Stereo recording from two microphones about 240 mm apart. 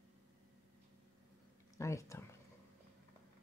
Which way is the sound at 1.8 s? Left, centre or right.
Centre.